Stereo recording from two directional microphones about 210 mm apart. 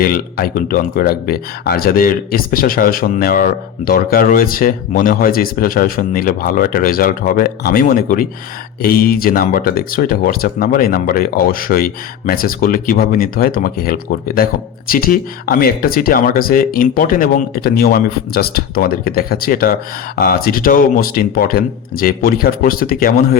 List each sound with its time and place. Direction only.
0.0 s speech: 45° left (ahead or behind)